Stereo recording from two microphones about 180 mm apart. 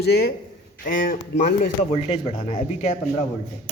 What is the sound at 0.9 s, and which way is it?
Speech, 50° left (ahead or behind).